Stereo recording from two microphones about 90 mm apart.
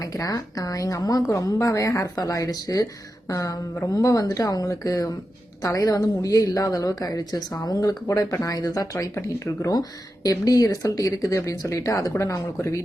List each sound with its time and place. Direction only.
0.0 s a woman's voice: 40° left (ahead or behind)